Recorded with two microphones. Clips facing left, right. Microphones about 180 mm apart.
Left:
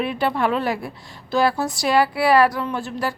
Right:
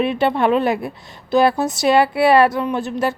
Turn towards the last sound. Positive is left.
turn(degrees=-20)  # may be behind; listen again after turning